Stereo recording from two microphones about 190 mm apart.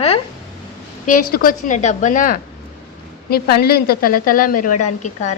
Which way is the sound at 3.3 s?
55° left (ahead or behind).